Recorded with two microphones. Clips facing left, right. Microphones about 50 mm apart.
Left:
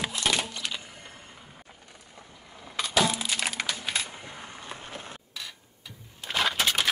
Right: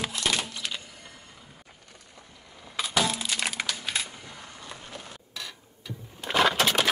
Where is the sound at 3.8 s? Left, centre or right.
Centre.